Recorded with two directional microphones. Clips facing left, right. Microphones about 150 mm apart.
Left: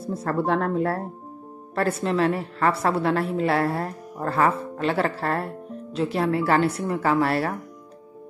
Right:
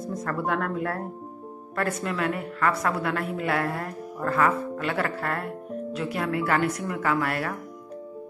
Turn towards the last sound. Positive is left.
turn(degrees=30)  # may be behind; listen again after turning